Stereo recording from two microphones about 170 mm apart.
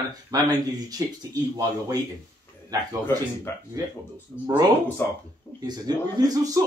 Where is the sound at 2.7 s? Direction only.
20° right (ahead or behind).